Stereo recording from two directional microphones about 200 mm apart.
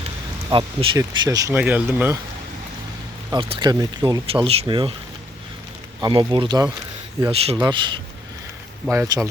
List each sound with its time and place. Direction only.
0.5 s speech: 25° right (ahead or behind); by 2.1 s 10° right (ahead or behind)
3.3 s speech: 20° right (ahead or behind)
6.0 s speech: 25° right (ahead or behind)